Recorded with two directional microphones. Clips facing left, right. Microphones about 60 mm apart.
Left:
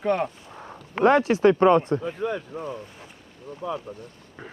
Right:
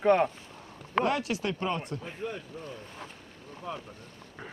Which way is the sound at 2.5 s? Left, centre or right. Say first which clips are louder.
Left 9 dB; left.